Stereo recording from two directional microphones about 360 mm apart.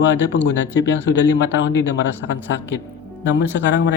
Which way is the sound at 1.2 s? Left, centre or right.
Left.